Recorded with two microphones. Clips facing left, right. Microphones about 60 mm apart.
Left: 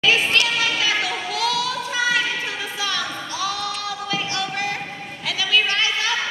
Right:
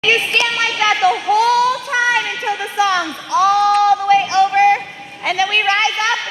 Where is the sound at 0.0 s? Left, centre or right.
Right.